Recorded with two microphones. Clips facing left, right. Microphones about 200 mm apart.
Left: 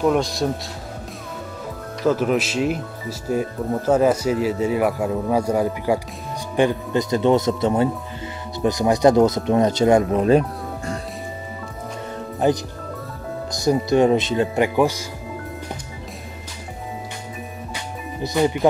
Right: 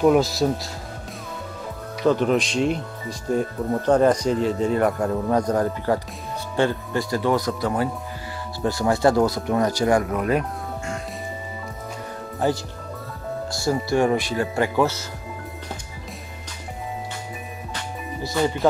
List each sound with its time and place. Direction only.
0.0 s speech: 5° right (ahead or behind)
2.0 s speech: 5° left (ahead or behind); by 10.4 s 30° left (ahead or behind)
12.4 s speech: 20° left (ahead or behind)
17.7 s music: 15° left (ahead or behind)